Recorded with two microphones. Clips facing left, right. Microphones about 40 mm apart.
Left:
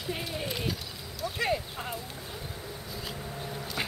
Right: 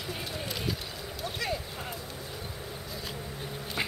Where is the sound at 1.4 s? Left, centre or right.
Centre.